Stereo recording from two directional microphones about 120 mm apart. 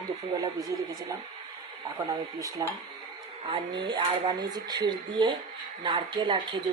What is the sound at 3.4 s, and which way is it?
A woman's voice, 45° right (ahead or behind).